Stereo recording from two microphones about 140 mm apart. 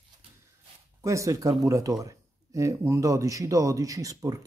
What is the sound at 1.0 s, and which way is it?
Speech, 20° right (ahead or behind).